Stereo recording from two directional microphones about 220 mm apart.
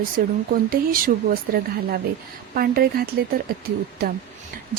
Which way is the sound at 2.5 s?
40° right (ahead or behind).